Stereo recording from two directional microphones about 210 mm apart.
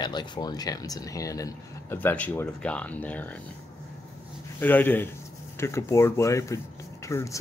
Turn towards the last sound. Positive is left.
turn(degrees=15)  # may be behind; listen again after turning